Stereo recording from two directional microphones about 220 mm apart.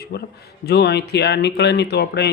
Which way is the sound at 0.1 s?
50° left (ahead or behind).